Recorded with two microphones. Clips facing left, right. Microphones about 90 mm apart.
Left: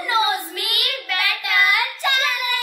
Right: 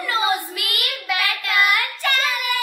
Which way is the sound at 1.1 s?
10° right (ahead or behind).